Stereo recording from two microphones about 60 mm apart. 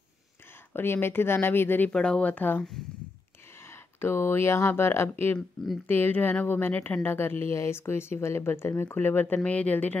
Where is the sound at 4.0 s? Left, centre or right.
Left.